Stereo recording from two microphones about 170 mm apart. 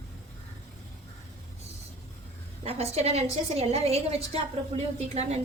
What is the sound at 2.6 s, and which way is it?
A woman's voice, 40° right (ahead or behind).